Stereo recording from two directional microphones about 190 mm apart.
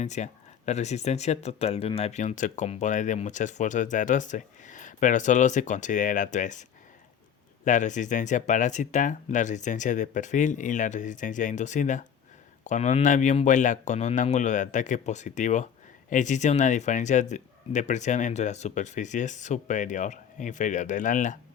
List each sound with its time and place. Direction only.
0.0 s speech: 40° left (ahead or behind)